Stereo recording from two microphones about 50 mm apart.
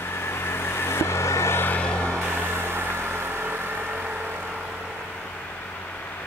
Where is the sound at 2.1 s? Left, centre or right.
Right.